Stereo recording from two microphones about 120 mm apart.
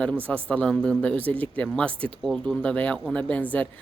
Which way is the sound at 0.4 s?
10° left (ahead or behind).